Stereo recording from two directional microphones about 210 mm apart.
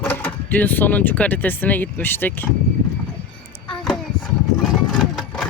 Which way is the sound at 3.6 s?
25° left (ahead or behind).